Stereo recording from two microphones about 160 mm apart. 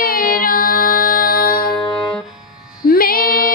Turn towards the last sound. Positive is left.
turn(degrees=65)  # may be behind; listen again after turning